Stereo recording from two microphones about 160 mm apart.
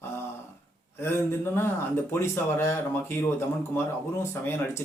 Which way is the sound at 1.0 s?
15° left (ahead or behind).